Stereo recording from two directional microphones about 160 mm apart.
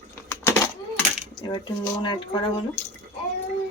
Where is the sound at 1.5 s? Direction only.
30° left (ahead or behind).